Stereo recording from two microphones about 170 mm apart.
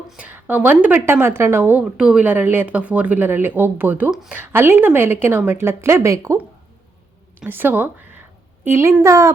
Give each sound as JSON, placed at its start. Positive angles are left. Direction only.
{"t": 0.1, "sound": "a woman's voice", "side_deg": -10}
{"t": 7.4, "sound": "a woman's voice", "side_deg": -10}